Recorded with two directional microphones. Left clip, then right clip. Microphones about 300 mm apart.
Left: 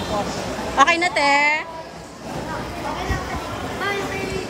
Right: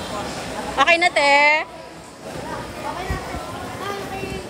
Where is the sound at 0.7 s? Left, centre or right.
Centre.